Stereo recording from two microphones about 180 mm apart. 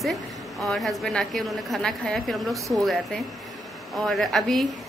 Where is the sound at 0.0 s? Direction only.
Centre (ahead or behind).